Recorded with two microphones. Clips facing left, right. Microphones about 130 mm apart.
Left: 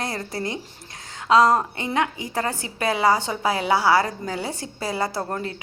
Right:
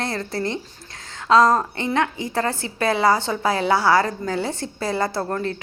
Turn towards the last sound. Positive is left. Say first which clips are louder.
# right 3 dB
turn(degrees=20)  # may be behind; listen again after turning